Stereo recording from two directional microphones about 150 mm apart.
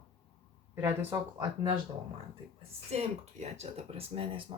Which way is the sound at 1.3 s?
30° right (ahead or behind).